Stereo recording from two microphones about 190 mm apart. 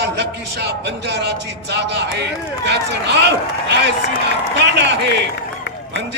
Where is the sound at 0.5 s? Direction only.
60° right (ahead or behind).